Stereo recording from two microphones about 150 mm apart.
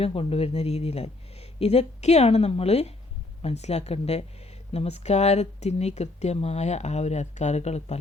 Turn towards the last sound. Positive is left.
turn(degrees=45)  # may be behind; listen again after turning